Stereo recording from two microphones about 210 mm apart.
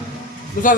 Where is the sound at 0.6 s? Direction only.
40° left (ahead or behind).